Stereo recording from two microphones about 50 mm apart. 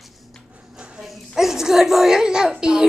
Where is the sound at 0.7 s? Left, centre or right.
Centre.